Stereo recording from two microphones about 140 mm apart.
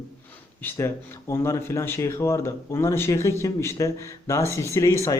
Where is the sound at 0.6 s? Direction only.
20° left (ahead or behind).